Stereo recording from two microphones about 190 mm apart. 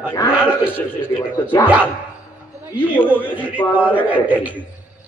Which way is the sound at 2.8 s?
10° left (ahead or behind).